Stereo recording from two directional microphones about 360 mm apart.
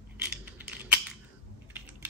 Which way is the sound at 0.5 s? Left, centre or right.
Centre.